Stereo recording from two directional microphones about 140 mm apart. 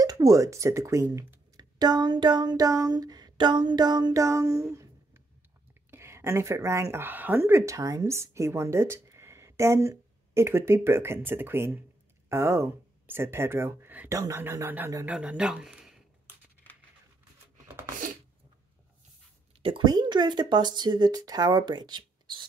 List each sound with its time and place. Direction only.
0.0 s a woman's voice: 25° right (ahead or behind)
15.0 s speech: 5° right (ahead or behind)
19.6 s speech: 35° right (ahead or behind)